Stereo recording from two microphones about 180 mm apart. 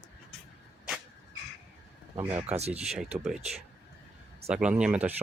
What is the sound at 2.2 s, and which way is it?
Speech, 10° right (ahead or behind).